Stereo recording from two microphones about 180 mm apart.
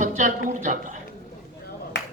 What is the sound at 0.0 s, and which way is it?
Speech, 45° right (ahead or behind).